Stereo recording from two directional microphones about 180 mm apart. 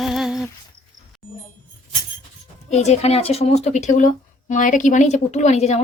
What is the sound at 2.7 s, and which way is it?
Speech, 40° left (ahead or behind).